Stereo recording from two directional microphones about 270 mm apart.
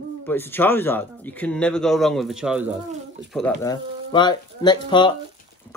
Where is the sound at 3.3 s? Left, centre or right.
Centre.